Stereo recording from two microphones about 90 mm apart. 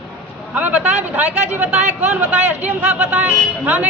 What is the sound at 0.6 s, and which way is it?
Speech, 20° right (ahead or behind).